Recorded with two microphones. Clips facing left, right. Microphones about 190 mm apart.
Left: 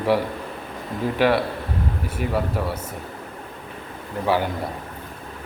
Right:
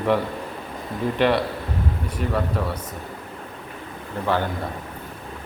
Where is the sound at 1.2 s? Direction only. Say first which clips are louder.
Left 1 dB; 5° left (ahead or behind).